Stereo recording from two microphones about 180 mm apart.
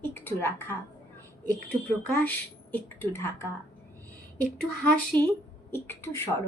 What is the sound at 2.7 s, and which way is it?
Speech, 10° left (ahead or behind).